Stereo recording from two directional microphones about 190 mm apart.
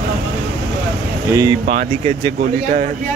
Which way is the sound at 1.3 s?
20° right (ahead or behind).